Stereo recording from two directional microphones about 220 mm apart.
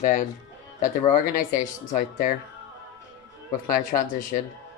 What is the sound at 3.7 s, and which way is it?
Speech, 35° left (ahead or behind).